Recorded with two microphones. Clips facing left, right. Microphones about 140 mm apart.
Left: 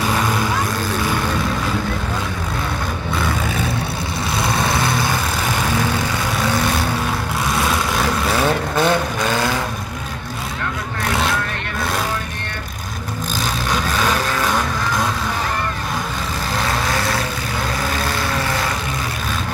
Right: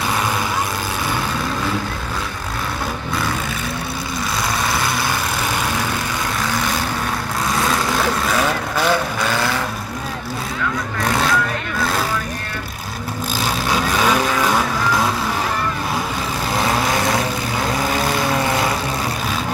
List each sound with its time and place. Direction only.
8.7 s vehicle: 20° left (ahead or behind)
13.7 s vehicle: 10° right (ahead or behind)
16.5 s vehicle: 15° right (ahead or behind)